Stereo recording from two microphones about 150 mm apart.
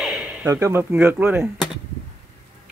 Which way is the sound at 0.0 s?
5° right (ahead or behind).